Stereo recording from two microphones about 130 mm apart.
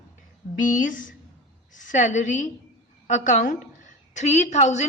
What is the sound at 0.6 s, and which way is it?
Speech, 90° left.